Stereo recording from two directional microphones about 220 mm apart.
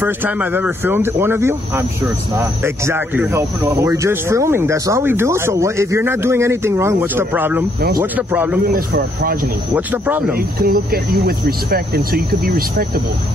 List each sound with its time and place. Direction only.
0.0 s speech: 10° right (ahead or behind)
8.7 s speech: 40° right (ahead or behind)
9.8 s speech: 5° right (ahead or behind)
10.3 s speech: 45° right (ahead or behind)